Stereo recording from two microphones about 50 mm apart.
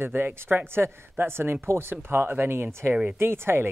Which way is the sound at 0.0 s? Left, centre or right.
Right.